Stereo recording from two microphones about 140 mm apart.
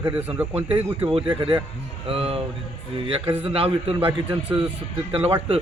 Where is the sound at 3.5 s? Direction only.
40° right (ahead or behind).